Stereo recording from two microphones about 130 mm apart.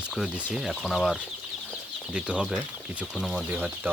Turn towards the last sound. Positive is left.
turn(degrees=-15)  # may be behind; listen again after turning